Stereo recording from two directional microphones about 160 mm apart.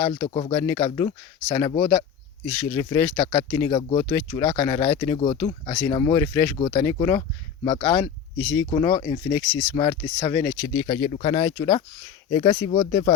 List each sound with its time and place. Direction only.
0.0 s speech: 35° left (ahead or behind)
0.5 s speech: 20° left (ahead or behind)
3.7 s speech: 30° left (ahead or behind)
6.6 s speech: 30° left (ahead or behind)
6.8 s speech: 20° left (ahead or behind)
7.2 s speech: 35° left (ahead or behind)
7.9 s speech: 20° left (ahead or behind)
10.8 s speech: 30° left (ahead or behind)